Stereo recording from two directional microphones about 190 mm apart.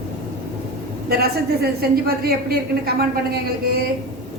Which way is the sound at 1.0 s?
55° right (ahead or behind).